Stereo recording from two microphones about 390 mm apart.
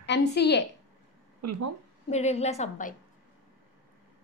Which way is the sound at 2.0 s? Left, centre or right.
Centre.